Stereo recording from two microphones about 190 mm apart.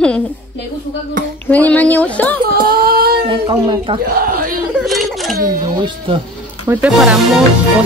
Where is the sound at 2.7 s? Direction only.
55° right (ahead or behind).